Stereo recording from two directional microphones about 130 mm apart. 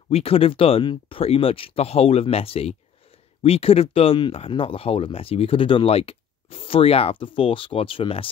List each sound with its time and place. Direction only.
0.1 s speech: 50° left (ahead or behind)